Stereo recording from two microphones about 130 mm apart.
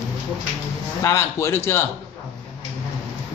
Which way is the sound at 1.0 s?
20° left (ahead or behind).